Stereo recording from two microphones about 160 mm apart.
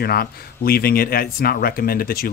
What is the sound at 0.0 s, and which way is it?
A man's voice, 75° left (ahead or behind).